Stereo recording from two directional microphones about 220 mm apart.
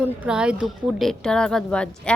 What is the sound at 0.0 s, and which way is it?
A woman's voice, 5° right (ahead or behind).